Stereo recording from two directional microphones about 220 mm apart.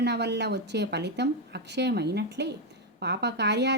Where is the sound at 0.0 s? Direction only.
50° right (ahead or behind).